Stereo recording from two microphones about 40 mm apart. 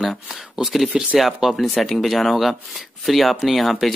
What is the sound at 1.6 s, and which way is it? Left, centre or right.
Speech, centre.